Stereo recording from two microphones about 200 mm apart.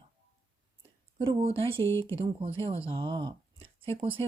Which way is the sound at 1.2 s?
25° right (ahead or behind).